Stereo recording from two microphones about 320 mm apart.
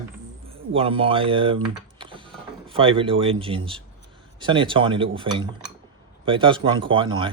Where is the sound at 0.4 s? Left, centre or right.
Centre.